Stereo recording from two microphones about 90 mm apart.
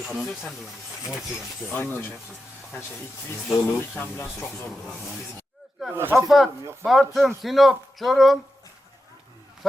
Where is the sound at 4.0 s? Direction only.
30° left (ahead or behind).